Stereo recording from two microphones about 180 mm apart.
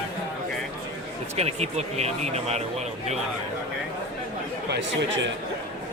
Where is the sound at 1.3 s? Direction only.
35° right (ahead or behind).